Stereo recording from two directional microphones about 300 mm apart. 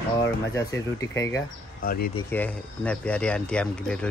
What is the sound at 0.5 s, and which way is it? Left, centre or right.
Speech, centre.